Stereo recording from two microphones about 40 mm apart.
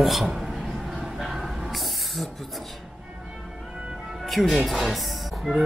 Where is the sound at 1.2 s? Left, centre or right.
Centre.